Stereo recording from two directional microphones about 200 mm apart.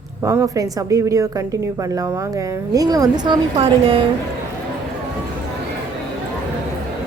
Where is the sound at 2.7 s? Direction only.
20° right (ahead or behind).